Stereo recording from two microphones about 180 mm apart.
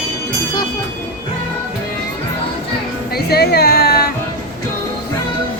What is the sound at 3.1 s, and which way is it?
Music, 60° left (ahead or behind).